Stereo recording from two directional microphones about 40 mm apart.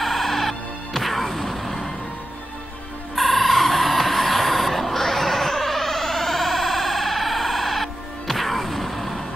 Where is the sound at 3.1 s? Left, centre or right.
Centre.